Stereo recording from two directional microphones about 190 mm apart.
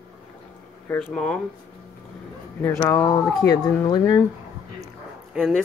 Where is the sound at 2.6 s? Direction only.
15° left (ahead or behind).